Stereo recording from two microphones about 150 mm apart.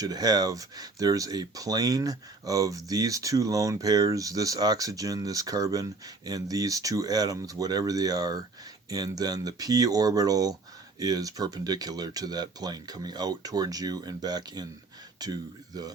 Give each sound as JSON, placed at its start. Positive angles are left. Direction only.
{"t": 0.0, "sound": "speech", "side_deg": -25}